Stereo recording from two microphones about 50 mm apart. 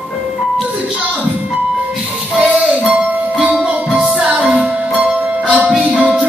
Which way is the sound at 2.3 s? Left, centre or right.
Right.